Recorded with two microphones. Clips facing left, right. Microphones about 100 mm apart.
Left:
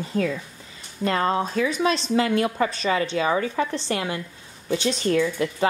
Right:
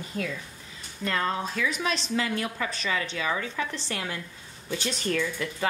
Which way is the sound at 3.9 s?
20° left (ahead or behind).